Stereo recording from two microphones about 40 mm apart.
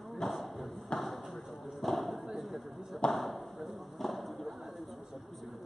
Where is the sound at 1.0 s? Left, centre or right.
Centre.